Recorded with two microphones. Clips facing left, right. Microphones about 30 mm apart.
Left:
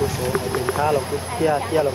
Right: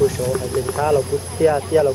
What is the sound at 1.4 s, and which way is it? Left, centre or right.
Speech, centre.